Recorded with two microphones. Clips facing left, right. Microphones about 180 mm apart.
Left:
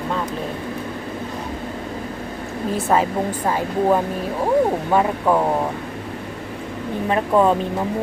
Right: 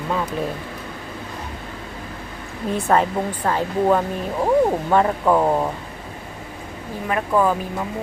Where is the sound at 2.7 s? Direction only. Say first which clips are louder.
Even; centre (ahead or behind).